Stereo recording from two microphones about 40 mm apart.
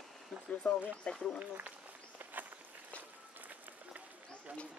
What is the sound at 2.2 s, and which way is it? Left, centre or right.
Walk, right.